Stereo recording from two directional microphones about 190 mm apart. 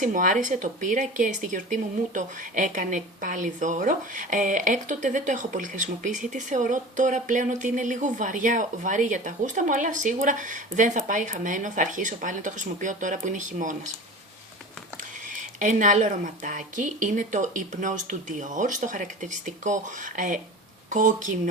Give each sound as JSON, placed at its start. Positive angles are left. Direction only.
{"t": 0.0, "sound": "a woman's voice", "side_deg": -45}
{"t": 15.5, "sound": "speech", "side_deg": -40}